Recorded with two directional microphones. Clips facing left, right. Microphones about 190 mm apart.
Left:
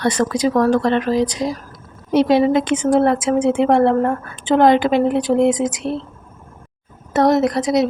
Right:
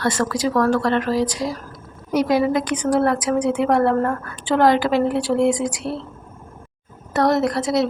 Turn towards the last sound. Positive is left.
turn(degrees=20)  # may be behind; listen again after turning